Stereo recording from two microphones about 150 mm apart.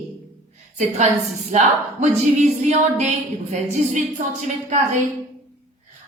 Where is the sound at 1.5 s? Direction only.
50° right (ahead or behind).